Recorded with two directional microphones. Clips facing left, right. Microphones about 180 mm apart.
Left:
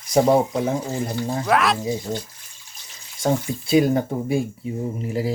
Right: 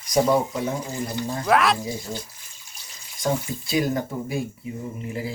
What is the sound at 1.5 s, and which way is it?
Speech, centre (ahead or behind).